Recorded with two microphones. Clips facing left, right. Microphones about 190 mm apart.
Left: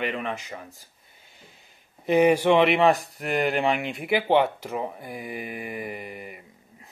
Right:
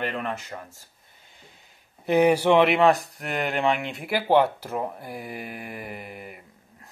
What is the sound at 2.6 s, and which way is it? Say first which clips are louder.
Speech: even; centre (ahead or behind).